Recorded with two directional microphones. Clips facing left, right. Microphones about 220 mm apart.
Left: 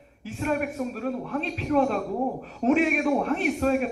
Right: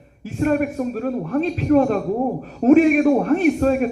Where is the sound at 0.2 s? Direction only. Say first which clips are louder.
Right 8 dB; 45° right (ahead or behind).